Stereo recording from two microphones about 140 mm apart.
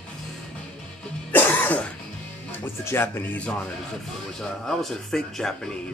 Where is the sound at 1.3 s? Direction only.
10° left (ahead or behind).